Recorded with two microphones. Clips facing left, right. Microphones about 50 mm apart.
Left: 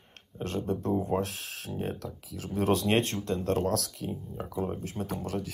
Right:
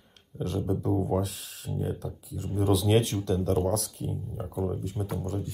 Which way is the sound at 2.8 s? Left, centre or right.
Left.